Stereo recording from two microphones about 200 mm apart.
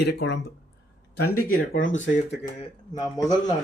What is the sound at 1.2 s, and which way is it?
Speech, 50° left (ahead or behind).